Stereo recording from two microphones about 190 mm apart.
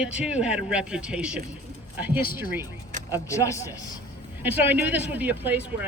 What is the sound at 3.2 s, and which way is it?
Speech, 15° left (ahead or behind).